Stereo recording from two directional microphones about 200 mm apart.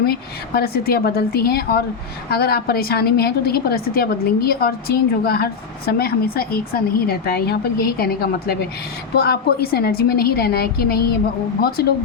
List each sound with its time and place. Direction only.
0.0 s a woman's voice: 50° left (ahead or behind)